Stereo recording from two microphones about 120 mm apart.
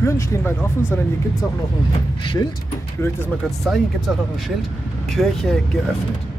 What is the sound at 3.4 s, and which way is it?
Speech, centre (ahead or behind).